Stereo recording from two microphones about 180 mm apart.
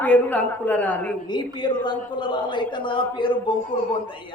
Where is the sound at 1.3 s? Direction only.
25° left (ahead or behind).